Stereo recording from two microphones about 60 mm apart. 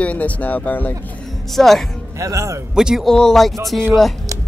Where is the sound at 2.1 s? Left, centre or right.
Right.